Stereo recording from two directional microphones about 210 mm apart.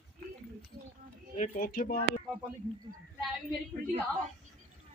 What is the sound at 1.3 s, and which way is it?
Speech, 40° left (ahead or behind).